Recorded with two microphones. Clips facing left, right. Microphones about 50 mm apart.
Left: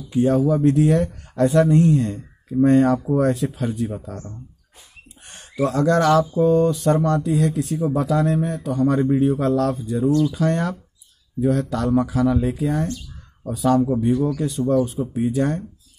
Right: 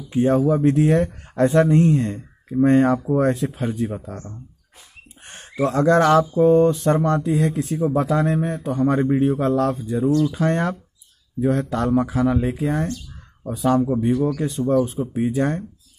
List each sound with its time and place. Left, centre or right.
0.1 s a man's voice: right
4.1 s speech: centre
5.2 s a man's voice: right